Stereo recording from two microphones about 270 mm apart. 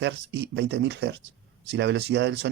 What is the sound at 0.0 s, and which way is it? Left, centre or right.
A man's voice, right.